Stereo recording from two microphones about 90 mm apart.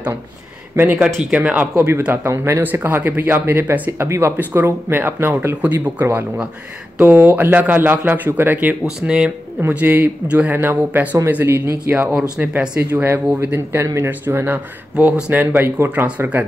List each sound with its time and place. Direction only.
1.3 s speech: 15° right (ahead or behind)
2.2 s speech: 30° right (ahead or behind)
9.0 s speech: 10° right (ahead or behind)
9.6 s speech: 20° right (ahead or behind)
13.8 s speech: 30° right (ahead or behind)
15.0 s speech: 15° right (ahead or behind)